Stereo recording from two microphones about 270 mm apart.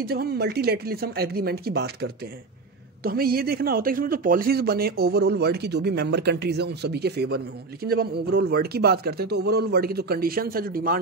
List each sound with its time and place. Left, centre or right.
0.0 s speech: right